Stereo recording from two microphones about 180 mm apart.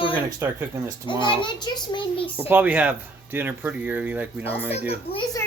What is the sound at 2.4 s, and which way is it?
Speech, 10° right (ahead or behind).